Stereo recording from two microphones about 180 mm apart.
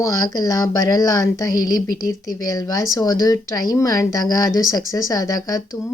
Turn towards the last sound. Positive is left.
turn(degrees=20)  # may be behind; listen again after turning